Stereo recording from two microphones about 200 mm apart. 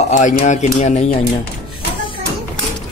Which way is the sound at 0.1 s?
35° left (ahead or behind).